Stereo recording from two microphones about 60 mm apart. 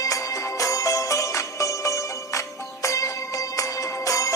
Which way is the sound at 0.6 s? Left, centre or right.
Left.